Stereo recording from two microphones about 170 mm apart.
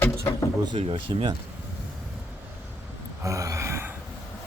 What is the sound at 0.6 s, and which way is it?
Speech, 30° right (ahead or behind).